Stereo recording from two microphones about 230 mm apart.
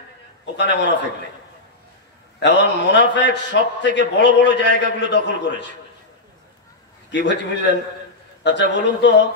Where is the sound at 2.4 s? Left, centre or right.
Left.